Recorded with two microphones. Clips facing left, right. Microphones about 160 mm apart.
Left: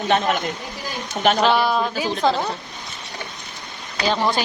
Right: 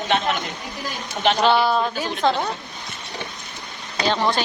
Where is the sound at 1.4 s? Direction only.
Centre (ahead or behind).